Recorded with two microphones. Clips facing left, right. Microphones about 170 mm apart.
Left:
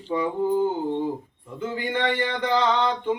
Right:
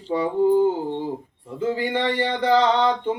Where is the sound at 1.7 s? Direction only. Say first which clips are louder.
Right 1 dB; 35° right (ahead or behind).